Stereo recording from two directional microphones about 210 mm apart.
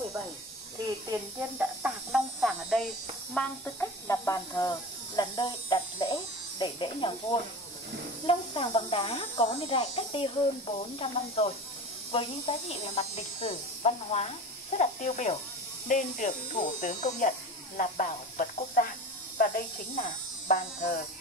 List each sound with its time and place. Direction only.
1.6 s speech: 5° right (ahead or behind); by 21.0 s 40° left (ahead or behind)